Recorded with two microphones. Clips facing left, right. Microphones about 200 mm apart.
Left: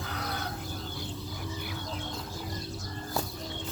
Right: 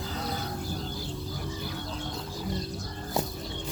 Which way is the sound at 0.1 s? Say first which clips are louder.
Right 2 dB; 65° left (ahead or behind).